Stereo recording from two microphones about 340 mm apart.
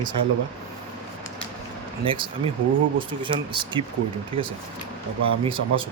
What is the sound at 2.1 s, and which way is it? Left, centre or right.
Speech, centre.